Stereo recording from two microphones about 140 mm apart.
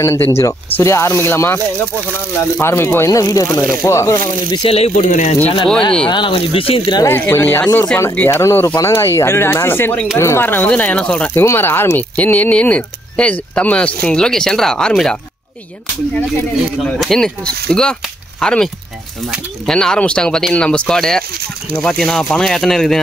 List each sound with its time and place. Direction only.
0.0 s speech: 20° left (ahead or behind)
4.5 s speech: 40° left (ahead or behind); by 5.3 s 60° left (ahead or behind)
6.0 s speech: 35° left (ahead or behind)
7.1 s speech: 15° left (ahead or behind)
16.8 s speech: 5° left (ahead or behind)